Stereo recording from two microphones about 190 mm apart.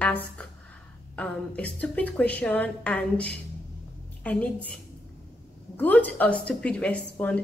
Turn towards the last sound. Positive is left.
turn(degrees=5)  # may be behind; listen again after turning